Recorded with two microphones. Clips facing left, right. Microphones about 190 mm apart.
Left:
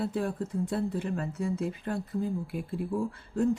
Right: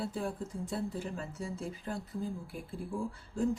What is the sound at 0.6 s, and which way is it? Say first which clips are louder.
Speech: left 4 dB; 65° left (ahead or behind).